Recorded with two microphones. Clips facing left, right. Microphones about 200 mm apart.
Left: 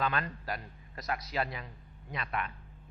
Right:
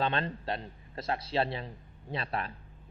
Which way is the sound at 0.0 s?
30° right (ahead or behind).